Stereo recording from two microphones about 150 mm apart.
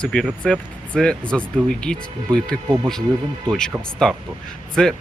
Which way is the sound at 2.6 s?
15° right (ahead or behind).